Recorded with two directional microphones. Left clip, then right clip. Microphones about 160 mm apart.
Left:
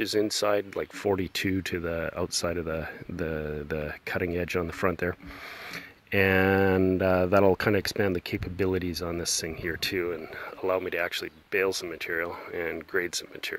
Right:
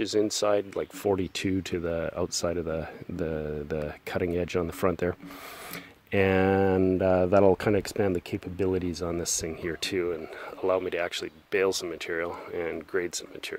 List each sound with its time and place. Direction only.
0.0 s speech: 35° right (ahead or behind)
6.1 s speech: 40° right (ahead or behind)